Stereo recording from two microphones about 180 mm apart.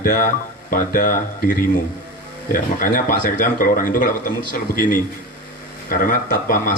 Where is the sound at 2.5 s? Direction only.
50° left (ahead or behind).